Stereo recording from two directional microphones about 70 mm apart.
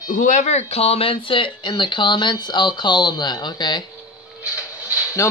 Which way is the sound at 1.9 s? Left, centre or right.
Left.